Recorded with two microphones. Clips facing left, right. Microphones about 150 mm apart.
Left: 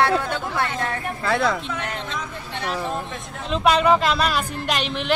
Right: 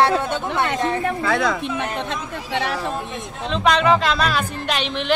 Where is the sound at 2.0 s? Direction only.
90° right.